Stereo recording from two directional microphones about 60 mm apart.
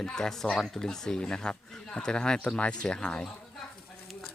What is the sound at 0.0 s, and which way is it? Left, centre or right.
Speech, centre.